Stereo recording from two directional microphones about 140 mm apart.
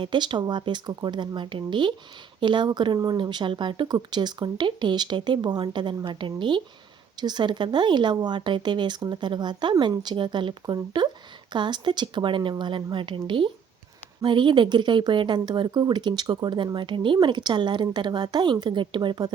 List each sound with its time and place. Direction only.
0.0 s a woman's voice: 35° right (ahead or behind)